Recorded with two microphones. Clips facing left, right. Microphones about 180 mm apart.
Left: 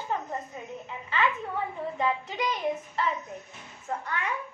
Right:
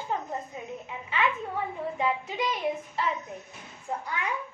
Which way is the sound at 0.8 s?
10° right (ahead or behind).